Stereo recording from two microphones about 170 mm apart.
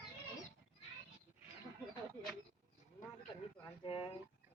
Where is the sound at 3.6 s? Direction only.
30° left (ahead or behind).